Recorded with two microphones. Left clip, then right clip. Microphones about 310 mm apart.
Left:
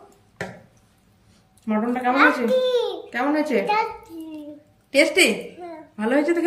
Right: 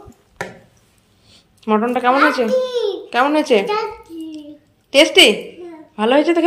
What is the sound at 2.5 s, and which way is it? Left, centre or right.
Speech, left.